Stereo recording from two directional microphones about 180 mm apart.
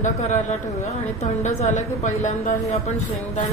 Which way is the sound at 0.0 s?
40° left (ahead or behind).